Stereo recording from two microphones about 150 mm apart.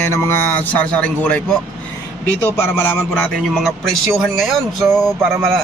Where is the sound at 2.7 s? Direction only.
5° left (ahead or behind).